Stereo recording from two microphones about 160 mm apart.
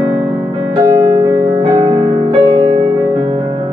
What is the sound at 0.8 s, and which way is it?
Music, 20° right (ahead or behind).